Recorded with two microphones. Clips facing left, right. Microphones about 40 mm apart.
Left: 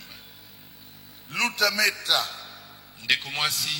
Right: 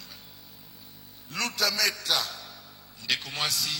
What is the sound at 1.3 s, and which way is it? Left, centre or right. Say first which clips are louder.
A man's voice: left 5 dB; left.